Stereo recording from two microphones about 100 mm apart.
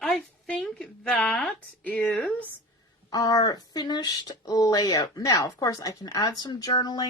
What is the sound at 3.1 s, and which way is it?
Speech, 40° left (ahead or behind).